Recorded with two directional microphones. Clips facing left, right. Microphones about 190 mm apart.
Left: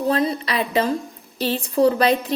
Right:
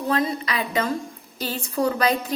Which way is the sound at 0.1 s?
30° left (ahead or behind).